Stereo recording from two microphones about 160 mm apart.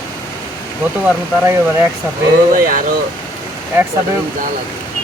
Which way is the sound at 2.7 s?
60° right (ahead or behind).